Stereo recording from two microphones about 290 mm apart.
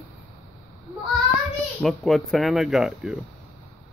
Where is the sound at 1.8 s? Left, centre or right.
Centre.